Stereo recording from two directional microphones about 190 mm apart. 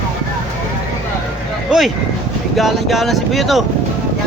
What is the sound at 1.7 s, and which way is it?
Speech, centre (ahead or behind).